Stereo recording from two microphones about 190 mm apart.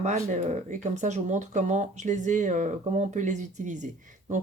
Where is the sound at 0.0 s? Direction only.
40° right (ahead or behind).